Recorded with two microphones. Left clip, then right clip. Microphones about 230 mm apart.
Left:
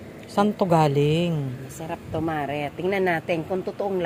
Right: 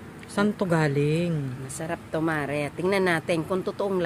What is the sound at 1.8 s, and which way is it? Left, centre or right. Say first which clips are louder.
Speech: right 1 dB; right.